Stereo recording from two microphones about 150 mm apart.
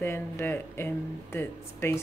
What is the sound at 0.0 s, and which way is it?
A woman's voice, 15° left (ahead or behind).